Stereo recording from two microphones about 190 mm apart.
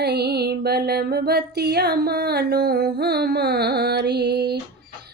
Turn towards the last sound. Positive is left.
turn(degrees=-60)  # may be behind; listen again after turning